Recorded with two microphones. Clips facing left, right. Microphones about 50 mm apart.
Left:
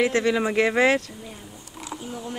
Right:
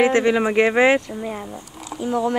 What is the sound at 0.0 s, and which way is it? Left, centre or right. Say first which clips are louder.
Speech: right 5 dB; right.